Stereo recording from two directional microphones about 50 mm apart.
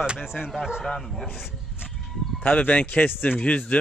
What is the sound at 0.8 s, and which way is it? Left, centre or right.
Speech, centre.